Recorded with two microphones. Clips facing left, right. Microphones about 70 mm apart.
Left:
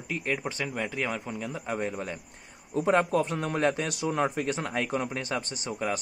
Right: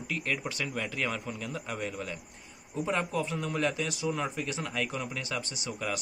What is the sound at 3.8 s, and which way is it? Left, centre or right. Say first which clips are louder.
A man's voice: left 4 dB; left.